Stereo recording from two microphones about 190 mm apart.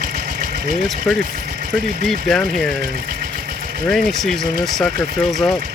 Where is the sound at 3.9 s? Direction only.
Centre (ahead or behind).